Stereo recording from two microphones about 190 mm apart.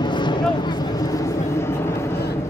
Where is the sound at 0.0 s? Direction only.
25° left (ahead or behind).